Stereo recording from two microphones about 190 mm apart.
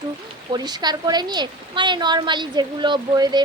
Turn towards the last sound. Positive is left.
turn(degrees=-25)  # may be behind; listen again after turning